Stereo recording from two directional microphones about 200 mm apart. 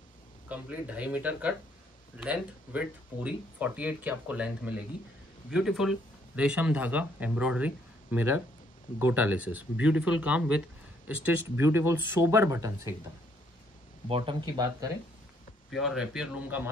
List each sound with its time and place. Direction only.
0.5 s speech: 5° right (ahead or behind)
14.0 s speech: 25° right (ahead or behind)
15.7 s speech: centre (ahead or behind)